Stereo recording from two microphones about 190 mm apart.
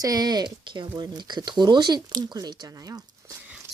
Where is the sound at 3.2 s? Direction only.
15° right (ahead or behind).